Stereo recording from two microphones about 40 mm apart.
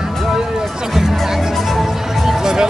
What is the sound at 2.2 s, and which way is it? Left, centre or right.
Music, centre.